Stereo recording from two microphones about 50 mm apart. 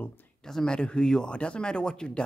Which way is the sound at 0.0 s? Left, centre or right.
Left.